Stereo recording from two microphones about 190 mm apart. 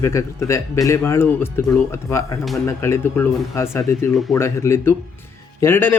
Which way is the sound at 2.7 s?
15° left (ahead or behind).